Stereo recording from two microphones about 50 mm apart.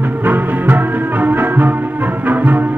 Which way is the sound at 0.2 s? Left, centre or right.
Right.